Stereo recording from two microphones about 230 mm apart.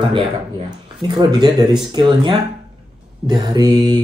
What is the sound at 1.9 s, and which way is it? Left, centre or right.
Speech, centre.